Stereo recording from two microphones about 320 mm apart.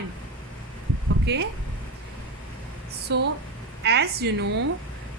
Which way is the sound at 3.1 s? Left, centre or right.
Right.